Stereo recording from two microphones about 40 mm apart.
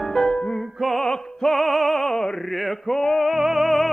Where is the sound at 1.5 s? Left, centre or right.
Centre.